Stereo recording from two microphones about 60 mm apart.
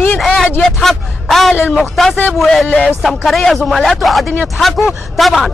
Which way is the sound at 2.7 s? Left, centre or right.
Left.